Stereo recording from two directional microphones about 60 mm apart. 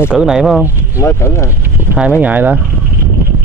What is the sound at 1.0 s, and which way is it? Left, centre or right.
Speech, left.